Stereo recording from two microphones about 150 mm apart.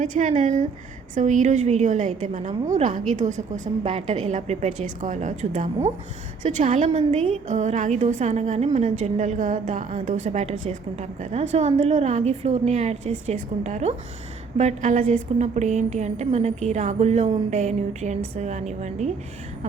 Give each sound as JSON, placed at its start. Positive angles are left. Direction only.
{"t": 0.0, "sound": "a woman's voice", "side_deg": -55}
{"t": 6.9, "sound": "a woman's voice", "side_deg": -40}
{"t": 7.4, "sound": "a woman's voice", "side_deg": -50}